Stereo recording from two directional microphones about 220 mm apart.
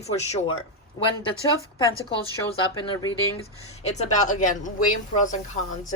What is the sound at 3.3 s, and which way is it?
Speech, 30° left (ahead or behind).